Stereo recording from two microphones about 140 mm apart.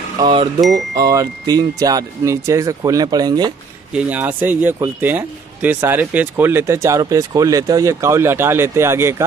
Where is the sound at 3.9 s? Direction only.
10° right (ahead or behind).